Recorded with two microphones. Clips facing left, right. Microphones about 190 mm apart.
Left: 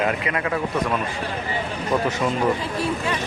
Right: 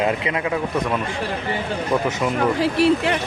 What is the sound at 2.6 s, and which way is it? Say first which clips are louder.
Speech: right 8 dB; 75° right (ahead or behind).